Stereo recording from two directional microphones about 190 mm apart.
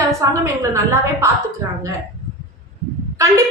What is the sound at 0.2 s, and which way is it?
Speech, 15° right (ahead or behind).